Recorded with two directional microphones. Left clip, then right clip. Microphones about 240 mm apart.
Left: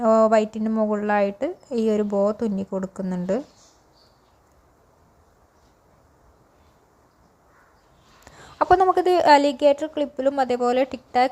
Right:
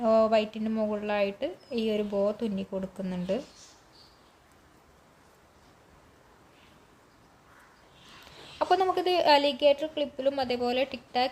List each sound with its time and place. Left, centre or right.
0.0 s speech: left
8.5 s speech: left